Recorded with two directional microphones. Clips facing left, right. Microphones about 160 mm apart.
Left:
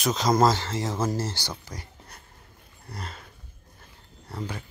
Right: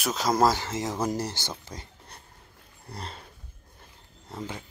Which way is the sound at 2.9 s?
30° right (ahead or behind).